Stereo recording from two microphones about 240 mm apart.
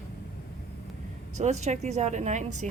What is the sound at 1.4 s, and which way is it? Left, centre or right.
Speech, right.